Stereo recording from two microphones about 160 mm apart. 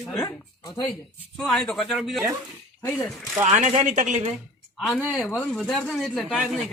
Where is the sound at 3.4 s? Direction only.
45° right (ahead or behind).